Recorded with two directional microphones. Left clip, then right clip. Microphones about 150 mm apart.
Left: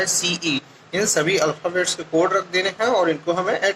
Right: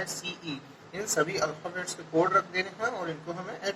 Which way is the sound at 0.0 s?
20° left (ahead or behind).